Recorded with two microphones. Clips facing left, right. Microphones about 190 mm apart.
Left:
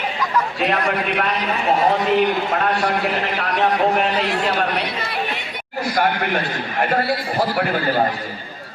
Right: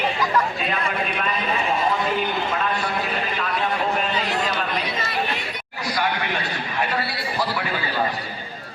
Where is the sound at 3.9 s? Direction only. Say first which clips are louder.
Left 4 dB; 70° left (ahead or behind).